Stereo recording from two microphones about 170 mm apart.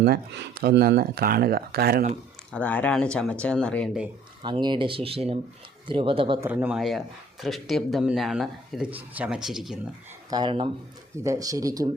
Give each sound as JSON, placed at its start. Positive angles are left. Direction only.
{"t": 0.0, "sound": "speech", "side_deg": -70}
{"t": 2.5, "sound": "speech", "side_deg": 10}
{"t": 4.4, "sound": "speech", "side_deg": -25}
{"t": 6.4, "sound": "speech", "side_deg": -10}
{"t": 10.2, "sound": "speech", "side_deg": -25}